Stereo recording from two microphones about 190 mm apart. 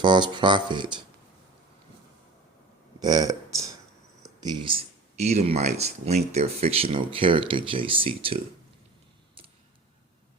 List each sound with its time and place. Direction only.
0.0 s speech: 25° right (ahead or behind)
3.0 s a sound: 20° right (ahead or behind)
4.4 s speech: 25° right (ahead or behind)